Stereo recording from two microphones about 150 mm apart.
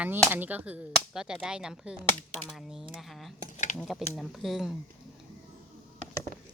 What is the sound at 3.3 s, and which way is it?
Dishes, 55° left (ahead or behind).